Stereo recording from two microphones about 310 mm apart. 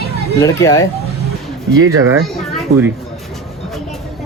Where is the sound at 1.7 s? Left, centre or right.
Right.